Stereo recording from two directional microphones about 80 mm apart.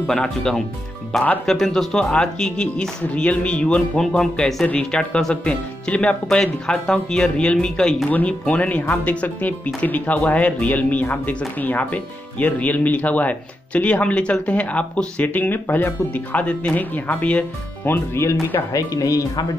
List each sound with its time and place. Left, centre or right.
0.0 s speech: centre
4.6 s speech: centre
17.8 s speech: left
18.7 s speech: left